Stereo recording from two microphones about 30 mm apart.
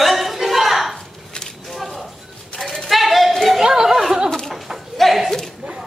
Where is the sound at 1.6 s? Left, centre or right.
Centre.